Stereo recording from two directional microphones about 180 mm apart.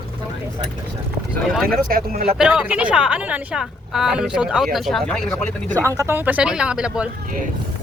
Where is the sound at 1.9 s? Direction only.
55° right (ahead or behind).